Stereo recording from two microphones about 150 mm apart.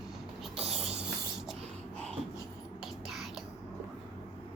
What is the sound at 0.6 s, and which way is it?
Music, 45° right (ahead or behind).